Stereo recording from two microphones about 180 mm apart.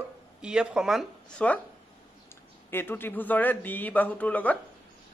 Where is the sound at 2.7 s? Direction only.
10° left (ahead or behind).